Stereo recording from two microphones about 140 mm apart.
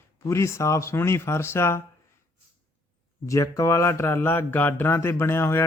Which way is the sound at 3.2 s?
25° left (ahead or behind).